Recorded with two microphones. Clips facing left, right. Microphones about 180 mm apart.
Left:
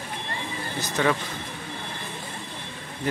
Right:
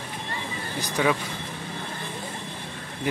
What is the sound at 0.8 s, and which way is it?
Speech, 10° right (ahead or behind).